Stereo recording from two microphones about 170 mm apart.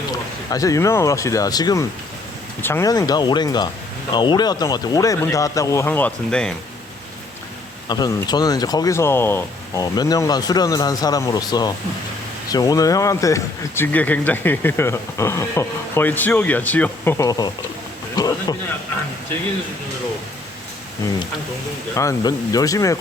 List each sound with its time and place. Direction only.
0.1 s speech: 20° left (ahead or behind)
7.9 s speech: 25° left (ahead or behind)
18.2 s a sound: 25° left (ahead or behind)
21.9 s speech: 20° left (ahead or behind)